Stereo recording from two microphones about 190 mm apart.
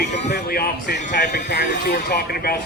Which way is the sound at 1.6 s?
45° left (ahead or behind).